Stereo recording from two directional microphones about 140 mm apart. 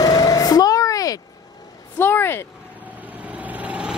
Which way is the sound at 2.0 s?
15° left (ahead or behind).